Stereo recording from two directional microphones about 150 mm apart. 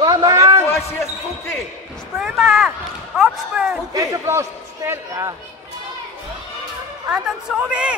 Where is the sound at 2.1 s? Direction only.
Centre (ahead or behind).